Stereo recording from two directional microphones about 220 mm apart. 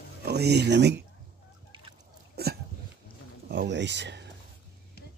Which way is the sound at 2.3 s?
45° right (ahead or behind).